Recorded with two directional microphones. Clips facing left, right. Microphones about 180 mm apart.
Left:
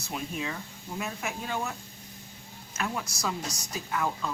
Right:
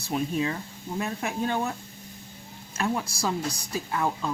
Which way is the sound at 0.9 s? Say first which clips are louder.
Right 5 dB; 35° right (ahead or behind).